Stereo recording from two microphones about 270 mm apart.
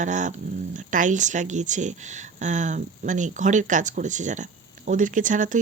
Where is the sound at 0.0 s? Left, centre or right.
Right.